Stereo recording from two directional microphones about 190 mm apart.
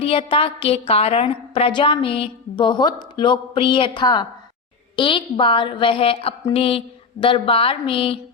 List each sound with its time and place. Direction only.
0.0 s a woman's voice: 30° left (ahead or behind)